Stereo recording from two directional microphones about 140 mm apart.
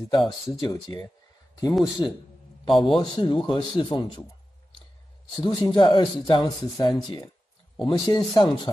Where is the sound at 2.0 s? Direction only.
30° left (ahead or behind).